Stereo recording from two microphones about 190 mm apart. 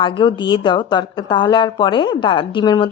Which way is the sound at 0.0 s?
25° left (ahead or behind).